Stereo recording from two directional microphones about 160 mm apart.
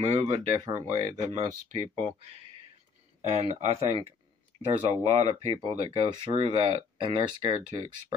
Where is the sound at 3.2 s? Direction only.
45° right (ahead or behind); by 7.8 s 25° right (ahead or behind).